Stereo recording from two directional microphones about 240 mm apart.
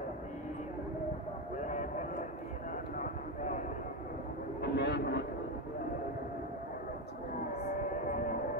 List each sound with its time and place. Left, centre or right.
1.7 s a sound: left
3.0 s clip-clop: left
4.6 s vehicle: left